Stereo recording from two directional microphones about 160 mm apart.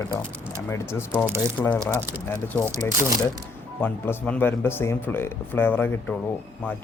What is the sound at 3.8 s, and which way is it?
Speech, 10° left (ahead or behind).